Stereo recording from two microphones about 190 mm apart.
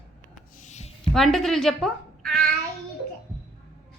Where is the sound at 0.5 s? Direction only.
40° left (ahead or behind).